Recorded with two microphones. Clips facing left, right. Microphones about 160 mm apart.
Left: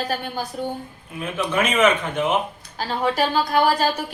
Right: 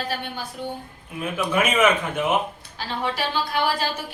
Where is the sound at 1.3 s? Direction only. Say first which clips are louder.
Even; 10° right (ahead or behind).